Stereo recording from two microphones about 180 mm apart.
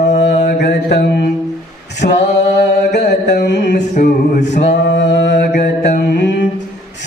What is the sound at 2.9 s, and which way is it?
Mantra, 70° left (ahead or behind).